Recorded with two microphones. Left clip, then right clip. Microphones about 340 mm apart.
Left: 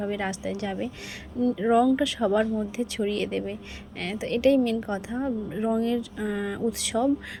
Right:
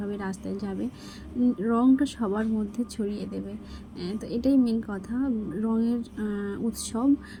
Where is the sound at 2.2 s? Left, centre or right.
Left.